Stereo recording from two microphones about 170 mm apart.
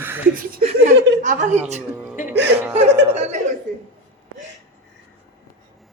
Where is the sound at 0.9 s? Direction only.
85° right.